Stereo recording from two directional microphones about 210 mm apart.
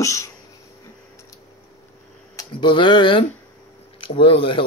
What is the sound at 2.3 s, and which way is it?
Speech, 20° left (ahead or behind).